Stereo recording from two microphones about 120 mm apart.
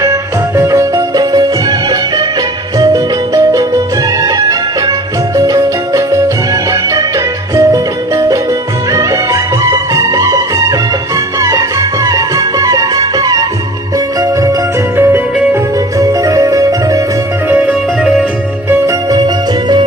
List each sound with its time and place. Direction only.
0.0 s music: 20° right (ahead or behind)
2.7 s music: 30° right (ahead or behind)
14.9 s music: 20° right (ahead or behind)
17.5 s music: 10° right (ahead or behind)
18.7 s music: 30° right (ahead or behind)